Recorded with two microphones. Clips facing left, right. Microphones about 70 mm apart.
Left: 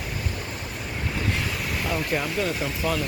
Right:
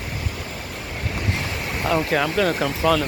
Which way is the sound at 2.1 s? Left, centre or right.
Right.